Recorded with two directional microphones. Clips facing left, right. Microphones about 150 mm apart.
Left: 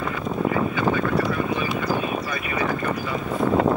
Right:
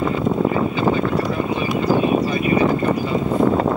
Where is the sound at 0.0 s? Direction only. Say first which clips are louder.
Right 6 dB; 25° right (ahead or behind).